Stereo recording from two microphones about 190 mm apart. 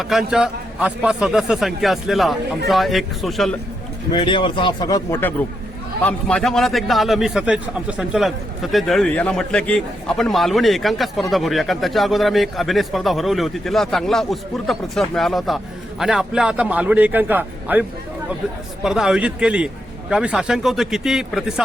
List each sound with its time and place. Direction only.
0.0 s a man's voice: centre (ahead or behind)
4.1 s speech: 25° left (ahead or behind)
6.1 s a man's voice: 5° left (ahead or behind)